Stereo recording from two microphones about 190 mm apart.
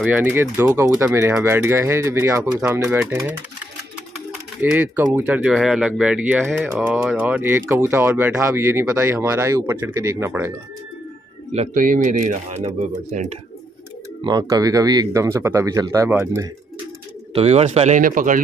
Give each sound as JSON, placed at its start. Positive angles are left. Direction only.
{"t": 0.0, "sound": "speech", "side_deg": -10}
{"t": 4.6, "sound": "speech", "side_deg": -10}
{"t": 11.5, "sound": "speech", "side_deg": -40}
{"t": 14.2, "sound": "speech", "side_deg": -20}
{"t": 17.3, "sound": "speech", "side_deg": -35}